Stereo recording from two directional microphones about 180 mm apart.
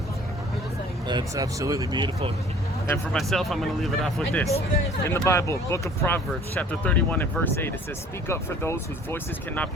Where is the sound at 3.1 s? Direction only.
Centre (ahead or behind).